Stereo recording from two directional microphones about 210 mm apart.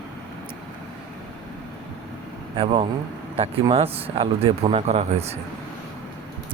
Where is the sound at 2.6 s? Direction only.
25° right (ahead or behind).